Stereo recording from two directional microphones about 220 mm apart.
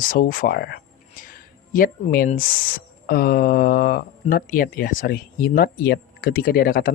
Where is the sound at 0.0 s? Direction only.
40° left (ahead or behind).